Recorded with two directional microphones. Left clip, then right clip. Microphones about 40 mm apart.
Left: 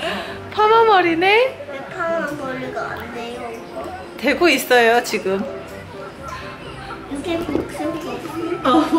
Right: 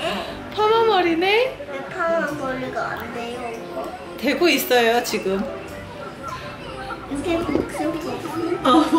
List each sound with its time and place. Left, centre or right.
0.2 s a sound: left
2.0 s a woman's voice: centre
4.2 s a woman's voice: left
7.2 s a woman's voice: centre
8.6 s a woman's voice: centre